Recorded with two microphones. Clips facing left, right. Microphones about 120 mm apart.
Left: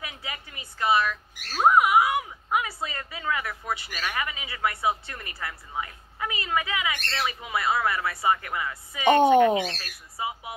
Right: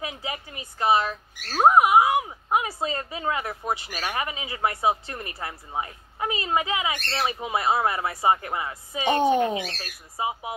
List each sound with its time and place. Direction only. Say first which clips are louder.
0.0 s a sound: right 5 dB; 25° right (ahead or behind)
1.5 s speech: right 3 dB; 25° right (ahead or behind)
9.2 s speech: left 3 dB; 55° left (ahead or behind)
10.1 s speech: right 4 dB; 20° right (ahead or behind)